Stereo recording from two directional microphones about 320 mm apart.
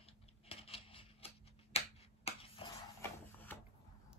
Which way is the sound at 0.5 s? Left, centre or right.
Centre.